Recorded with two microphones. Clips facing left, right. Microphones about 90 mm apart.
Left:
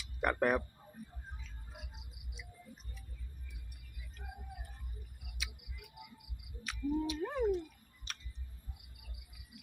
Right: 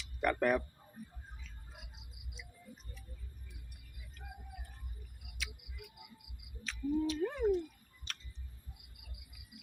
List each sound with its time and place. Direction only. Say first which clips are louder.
0.2 s speech: even; 15° left (ahead or behind)
6.7 s speech: right 1 dB; 15° left (ahead or behind)
8.1 s a sound: even; 15° left (ahead or behind)